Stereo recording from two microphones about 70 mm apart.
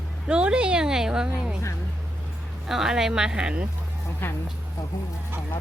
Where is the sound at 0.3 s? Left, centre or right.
Centre.